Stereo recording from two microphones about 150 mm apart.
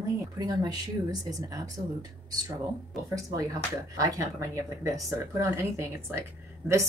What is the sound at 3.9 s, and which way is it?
Speech, 20° right (ahead or behind).